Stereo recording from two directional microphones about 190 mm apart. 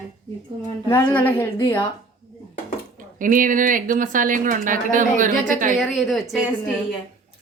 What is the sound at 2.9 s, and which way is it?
Speech, 45° right (ahead or behind).